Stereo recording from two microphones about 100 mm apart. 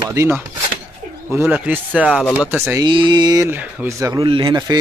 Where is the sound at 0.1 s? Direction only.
30° right (ahead or behind).